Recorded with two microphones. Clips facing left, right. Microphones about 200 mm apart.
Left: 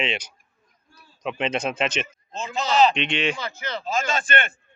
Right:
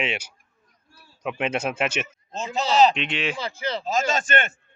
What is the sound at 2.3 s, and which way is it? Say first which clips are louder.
Speech: right 1 dB; 40° right (ahead or behind).